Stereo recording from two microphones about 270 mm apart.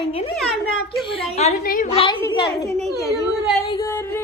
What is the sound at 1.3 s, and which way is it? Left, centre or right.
A woman's voice, left.